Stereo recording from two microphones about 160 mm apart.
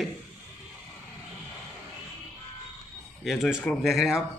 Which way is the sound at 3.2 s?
Centre (ahead or behind).